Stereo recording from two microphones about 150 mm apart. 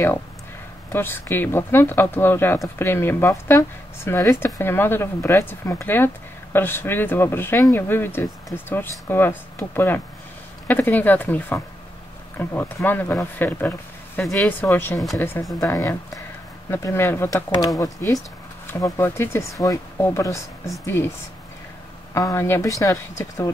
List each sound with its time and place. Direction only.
0.9 s speech: 15° left (ahead or behind)
22.1 s speech: 20° left (ahead or behind)